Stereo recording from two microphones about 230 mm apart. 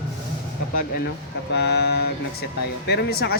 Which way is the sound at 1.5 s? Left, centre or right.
Left.